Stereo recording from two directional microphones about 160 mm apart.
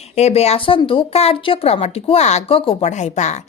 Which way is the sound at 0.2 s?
45° left (ahead or behind).